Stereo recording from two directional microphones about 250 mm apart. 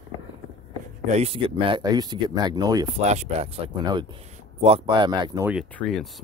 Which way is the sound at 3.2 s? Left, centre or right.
Right.